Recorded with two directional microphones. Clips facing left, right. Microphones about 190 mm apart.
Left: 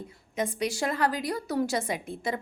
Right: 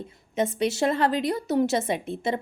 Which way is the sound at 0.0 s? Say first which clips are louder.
Right 5 dB; 25° right (ahead or behind).